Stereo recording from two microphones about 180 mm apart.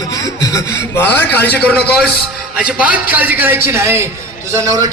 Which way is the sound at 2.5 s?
5° right (ahead or behind).